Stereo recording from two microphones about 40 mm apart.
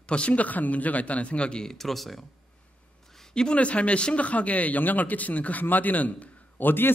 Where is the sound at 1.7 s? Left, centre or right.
Centre.